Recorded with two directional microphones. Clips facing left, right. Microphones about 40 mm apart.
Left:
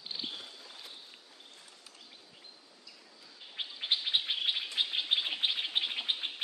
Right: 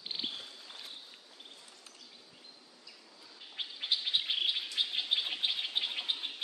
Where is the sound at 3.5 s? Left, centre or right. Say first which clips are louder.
Left 1 dB; centre.